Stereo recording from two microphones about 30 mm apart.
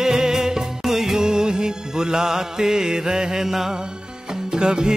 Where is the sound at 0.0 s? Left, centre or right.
Centre.